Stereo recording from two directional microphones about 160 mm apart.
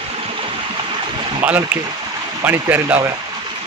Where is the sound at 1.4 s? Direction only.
10° right (ahead or behind).